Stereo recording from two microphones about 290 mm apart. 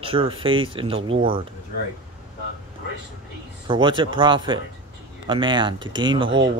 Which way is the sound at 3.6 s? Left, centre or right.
Centre.